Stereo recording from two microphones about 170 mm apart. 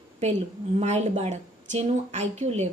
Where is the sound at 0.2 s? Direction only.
40° right (ahead or behind).